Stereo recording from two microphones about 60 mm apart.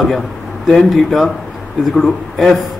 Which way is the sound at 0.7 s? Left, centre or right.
Centre.